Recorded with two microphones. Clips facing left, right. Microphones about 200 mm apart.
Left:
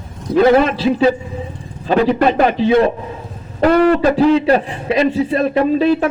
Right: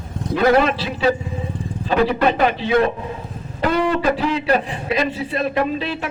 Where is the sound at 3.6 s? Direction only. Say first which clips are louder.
Left 8 dB; 60° left (ahead or behind).